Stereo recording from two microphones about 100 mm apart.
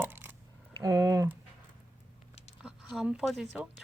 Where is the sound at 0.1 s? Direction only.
20° right (ahead or behind).